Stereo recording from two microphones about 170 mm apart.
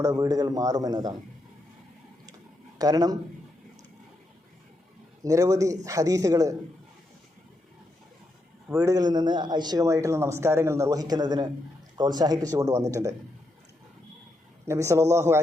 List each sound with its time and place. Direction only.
0.0 s speech: 20° right (ahead or behind)
2.7 s speech: 20° right (ahead or behind)
5.2 s speech: 20° right (ahead or behind)
8.8 s speech: 20° right (ahead or behind)
14.6 s speech: 15° right (ahead or behind)